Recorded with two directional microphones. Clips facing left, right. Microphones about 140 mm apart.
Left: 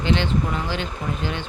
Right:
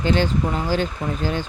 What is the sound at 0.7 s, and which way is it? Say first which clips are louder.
Speech: right 5 dB; 40° right (ahead or behind).